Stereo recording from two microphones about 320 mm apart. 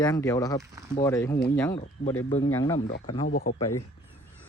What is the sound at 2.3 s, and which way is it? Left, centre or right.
Speech, centre.